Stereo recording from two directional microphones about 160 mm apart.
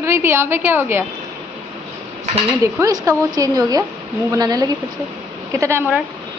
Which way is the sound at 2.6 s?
20° right (ahead or behind).